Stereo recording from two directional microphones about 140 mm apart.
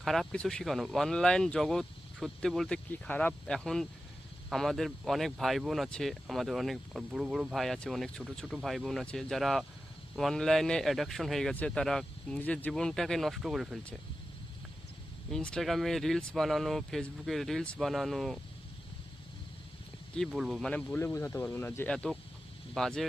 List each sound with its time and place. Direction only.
0.0 s speech: centre (ahead or behind)
15.3 s speech: 5° left (ahead or behind)
20.1 s speech: centre (ahead or behind); by 21.9 s 15° left (ahead or behind)
22.7 s speech: 5° left (ahead or behind)